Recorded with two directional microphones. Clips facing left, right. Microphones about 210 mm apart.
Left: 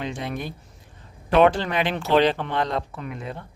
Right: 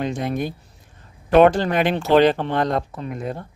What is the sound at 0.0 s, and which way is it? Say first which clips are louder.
Speech: right 6 dB; 45° right (ahead or behind).